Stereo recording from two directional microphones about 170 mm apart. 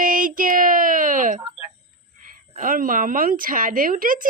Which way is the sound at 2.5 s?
55° right (ahead or behind).